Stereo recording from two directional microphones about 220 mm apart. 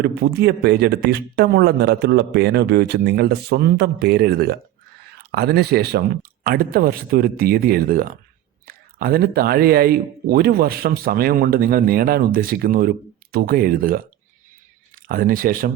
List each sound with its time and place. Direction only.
0.0 s a man's voice: 50° right (ahead or behind)